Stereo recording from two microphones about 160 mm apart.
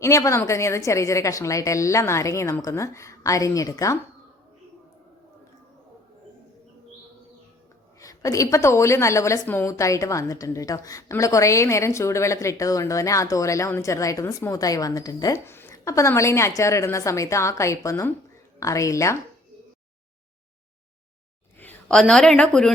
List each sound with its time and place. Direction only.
0.0 s a woman's voice: 20° left (ahead or behind)
7.9 s a woman's voice: 20° left (ahead or behind)
21.6 s a woman's voice: 10° left (ahead or behind)